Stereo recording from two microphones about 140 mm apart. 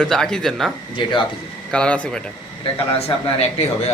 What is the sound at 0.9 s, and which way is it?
Speech, 35° left (ahead or behind).